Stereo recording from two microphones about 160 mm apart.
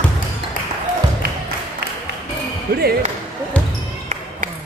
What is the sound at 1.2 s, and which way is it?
Music, 70° right (ahead or behind).